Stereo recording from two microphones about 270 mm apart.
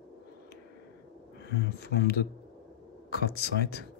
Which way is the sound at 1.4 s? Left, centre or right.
Left.